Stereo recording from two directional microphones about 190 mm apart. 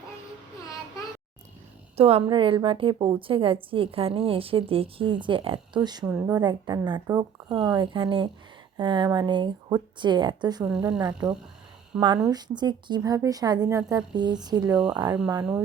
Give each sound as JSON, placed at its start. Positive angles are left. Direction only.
{"t": 2.0, "sound": "a woman's voice", "side_deg": -30}
{"t": 6.1, "sound": "a woman's voice", "side_deg": -5}
{"t": 6.3, "sound": "a woman's voice", "side_deg": -25}
{"t": 14.7, "sound": "speech", "side_deg": -5}
{"t": 14.9, "sound": "a woman's voice", "side_deg": -20}